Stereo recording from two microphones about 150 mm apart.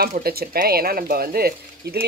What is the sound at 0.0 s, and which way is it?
Speech, 90° right.